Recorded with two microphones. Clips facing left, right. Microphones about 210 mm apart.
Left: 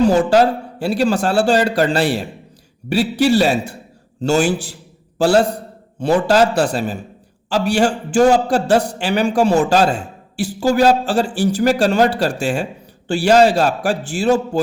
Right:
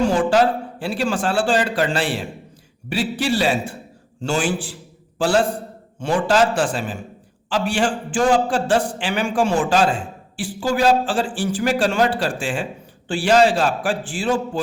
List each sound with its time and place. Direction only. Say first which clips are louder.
0.0 s a man's voice: left 4 dB; 40° left (ahead or behind)